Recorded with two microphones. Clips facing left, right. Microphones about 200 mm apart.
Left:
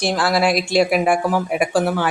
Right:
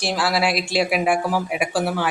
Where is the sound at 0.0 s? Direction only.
5° right (ahead or behind).